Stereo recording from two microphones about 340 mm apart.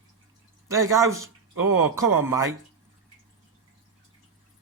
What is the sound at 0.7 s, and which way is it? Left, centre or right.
Speech, centre.